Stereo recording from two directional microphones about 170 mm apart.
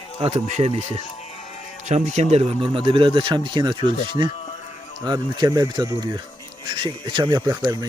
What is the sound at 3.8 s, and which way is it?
Speech, 45° left (ahead or behind).